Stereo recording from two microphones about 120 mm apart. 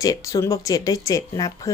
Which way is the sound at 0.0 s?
30° left (ahead or behind).